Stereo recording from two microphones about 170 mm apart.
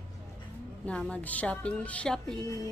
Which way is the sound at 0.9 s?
5° left (ahead or behind).